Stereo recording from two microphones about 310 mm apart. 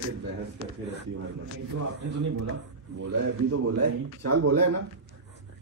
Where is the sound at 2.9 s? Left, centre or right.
Right.